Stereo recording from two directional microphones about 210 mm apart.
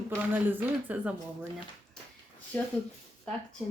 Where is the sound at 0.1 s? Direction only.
10° right (ahead or behind).